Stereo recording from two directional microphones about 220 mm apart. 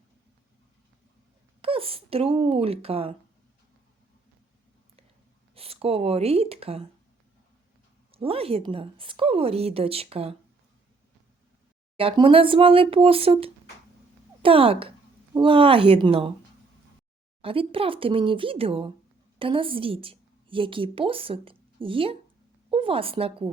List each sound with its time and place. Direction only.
1.6 s speech: 25° right (ahead or behind)
5.5 s speech: 25° right (ahead or behind)
8.1 s speech: 25° right (ahead or behind)
11.9 s speech: 25° right (ahead or behind)
17.4 s a woman's voice: 25° right (ahead or behind)